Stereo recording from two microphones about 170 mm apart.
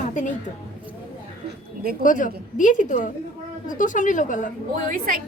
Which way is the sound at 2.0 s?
50° left (ahead or behind).